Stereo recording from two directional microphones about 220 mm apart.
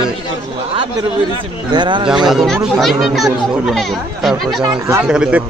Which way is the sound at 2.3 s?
Centre (ahead or behind).